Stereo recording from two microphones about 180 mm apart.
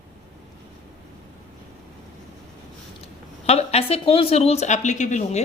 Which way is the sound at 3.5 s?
35° left (ahead or behind).